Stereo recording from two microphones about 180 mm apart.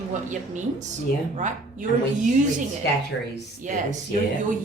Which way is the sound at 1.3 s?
45° right (ahead or behind).